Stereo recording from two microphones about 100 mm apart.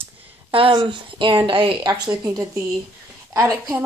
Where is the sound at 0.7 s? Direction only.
55° right (ahead or behind); by 3.6 s 30° right (ahead or behind).